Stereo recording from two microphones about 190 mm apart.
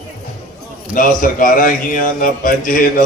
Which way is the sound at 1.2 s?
45° left (ahead or behind).